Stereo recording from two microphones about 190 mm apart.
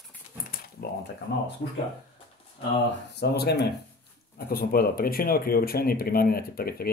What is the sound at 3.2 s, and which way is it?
Speech, 60° left (ahead or behind).